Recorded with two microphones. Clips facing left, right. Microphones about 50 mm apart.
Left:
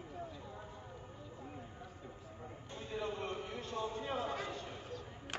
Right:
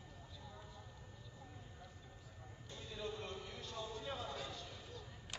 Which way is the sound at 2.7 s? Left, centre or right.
Left.